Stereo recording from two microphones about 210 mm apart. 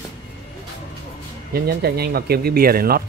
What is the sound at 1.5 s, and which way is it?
Speech, 50° right (ahead or behind).